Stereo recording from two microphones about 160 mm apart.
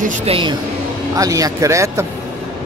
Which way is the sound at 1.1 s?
20° right (ahead or behind).